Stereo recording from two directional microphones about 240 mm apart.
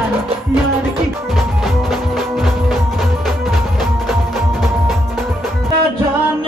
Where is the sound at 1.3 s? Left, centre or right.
Centre.